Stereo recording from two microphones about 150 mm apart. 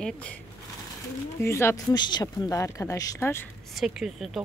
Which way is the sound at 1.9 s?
30° left (ahead or behind).